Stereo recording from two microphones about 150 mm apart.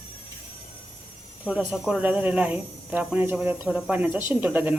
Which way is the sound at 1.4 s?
5° right (ahead or behind).